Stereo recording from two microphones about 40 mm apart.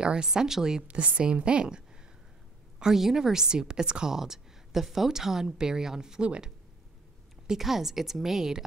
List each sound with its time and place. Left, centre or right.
0.0 s a woman's voice: centre
0.8 s a woman's voice: right
1.2 s a woman's voice: right
2.8 s a woman's voice: centre
7.5 s a woman's voice: centre